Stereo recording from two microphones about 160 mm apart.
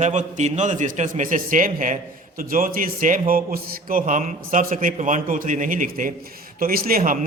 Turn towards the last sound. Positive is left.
turn(degrees=-60)  # may be behind; listen again after turning